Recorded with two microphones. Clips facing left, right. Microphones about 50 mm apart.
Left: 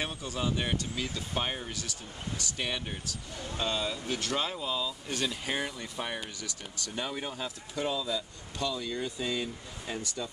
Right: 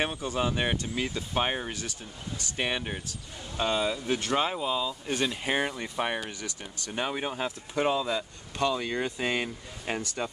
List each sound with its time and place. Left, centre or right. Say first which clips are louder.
0.0 s speech: right 5 dB; right